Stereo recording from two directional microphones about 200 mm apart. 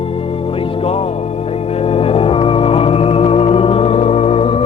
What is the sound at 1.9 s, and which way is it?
Organ, 30° left (ahead or behind).